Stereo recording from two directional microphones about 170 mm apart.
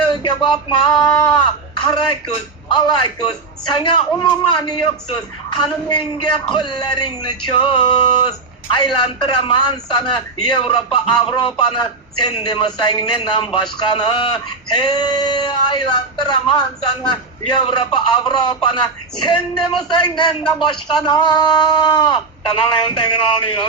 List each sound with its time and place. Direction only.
0.1 s a man's voice: 30° left (ahead or behind)